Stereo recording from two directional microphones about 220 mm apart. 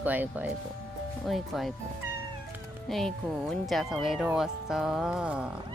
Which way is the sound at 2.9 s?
Centre (ahead or behind).